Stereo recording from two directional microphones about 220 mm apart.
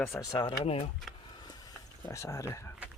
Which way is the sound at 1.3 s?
20° left (ahead or behind).